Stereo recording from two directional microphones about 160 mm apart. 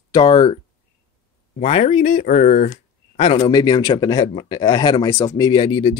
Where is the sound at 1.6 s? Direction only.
40° left (ahead or behind).